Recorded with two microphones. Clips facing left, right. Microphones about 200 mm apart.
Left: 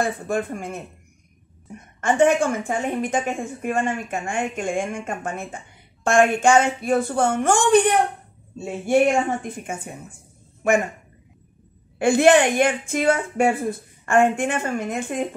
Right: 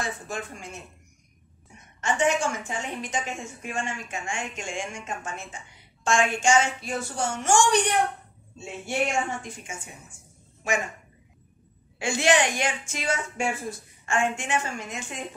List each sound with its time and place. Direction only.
0.0 s a woman's voice: 55° left (ahead or behind)
12.0 s a woman's voice: 55° left (ahead or behind)